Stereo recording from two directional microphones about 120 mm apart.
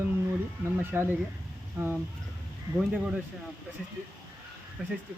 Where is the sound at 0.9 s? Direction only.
20° right (ahead or behind).